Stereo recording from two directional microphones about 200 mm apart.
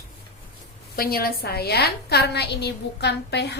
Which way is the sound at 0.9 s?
50° left (ahead or behind).